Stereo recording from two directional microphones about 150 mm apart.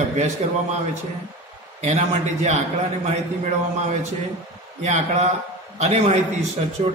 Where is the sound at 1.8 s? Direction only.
50° right (ahead or behind).